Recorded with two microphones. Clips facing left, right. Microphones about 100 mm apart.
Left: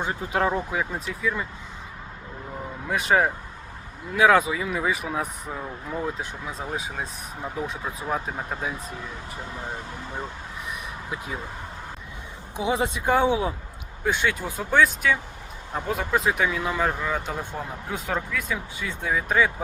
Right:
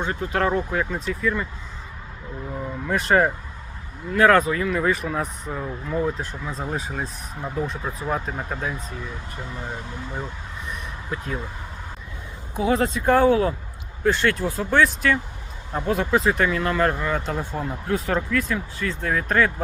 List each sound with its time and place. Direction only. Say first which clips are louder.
0.0 s speech: right 1 dB; 15° left (ahead or behind)
2.8 s speech: right 2 dB; 5° left (ahead or behind)
11.1 s speech: right 3 dB; 10° left (ahead or behind)
12.5 s speech: right 4 dB; 15° left (ahead or behind)